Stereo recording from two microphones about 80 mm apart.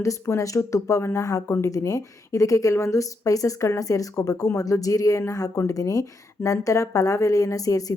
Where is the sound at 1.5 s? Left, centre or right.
Left.